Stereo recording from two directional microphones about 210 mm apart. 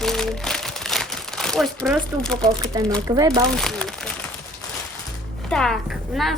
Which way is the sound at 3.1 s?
15° right (ahead or behind).